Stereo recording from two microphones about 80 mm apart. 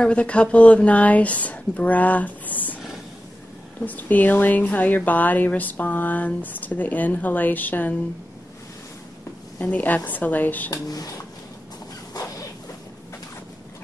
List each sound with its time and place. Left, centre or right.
0.0 s a woman's voice: centre
3.8 s speech: left
9.6 s speech: centre
10.7 s speech: left
12.1 s a sound: left